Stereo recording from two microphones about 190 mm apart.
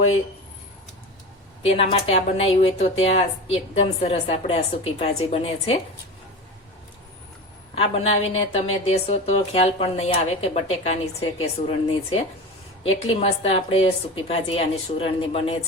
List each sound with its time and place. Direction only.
1.6 s a woman's voice: 35° left (ahead or behind)
7.8 s a woman's voice: 35° left (ahead or behind)
12.9 s a woman's voice: 35° left (ahead or behind)